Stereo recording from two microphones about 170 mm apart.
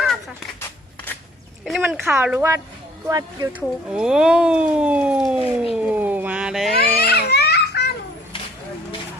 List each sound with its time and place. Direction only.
1.6 s speech: centre (ahead or behind)
2.0 s speech: 10° right (ahead or behind)
3.1 s speech: 20° right (ahead or behind)
3.8 s speech: 5° right (ahead or behind)
5.7 s a sound: 10° right (ahead or behind)
6.7 s babbling: 65° left (ahead or behind)